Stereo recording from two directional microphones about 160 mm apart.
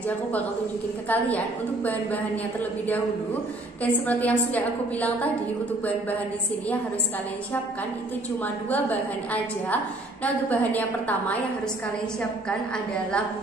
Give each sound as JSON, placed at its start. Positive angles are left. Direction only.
{"t": 1.0, "sound": "a woman's voice", "side_deg": 10}
{"t": 3.8, "sound": "a woman's voice", "side_deg": 10}
{"t": 8.6, "sound": "a woman's voice", "side_deg": 10}